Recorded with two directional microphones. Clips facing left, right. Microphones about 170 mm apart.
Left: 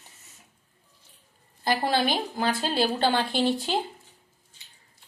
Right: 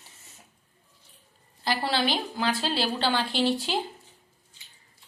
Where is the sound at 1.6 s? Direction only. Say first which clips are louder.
Left 2 dB; 50° left (ahead or behind).